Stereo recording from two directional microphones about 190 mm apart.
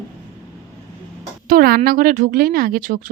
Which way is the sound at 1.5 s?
50° right (ahead or behind).